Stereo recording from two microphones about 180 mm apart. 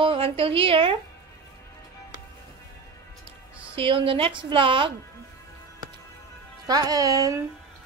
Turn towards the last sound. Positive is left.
turn(degrees=-20)  # may be behind; listen again after turning